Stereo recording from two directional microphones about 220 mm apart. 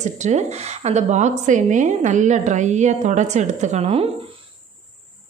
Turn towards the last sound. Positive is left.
turn(degrees=-25)  # may be behind; listen again after turning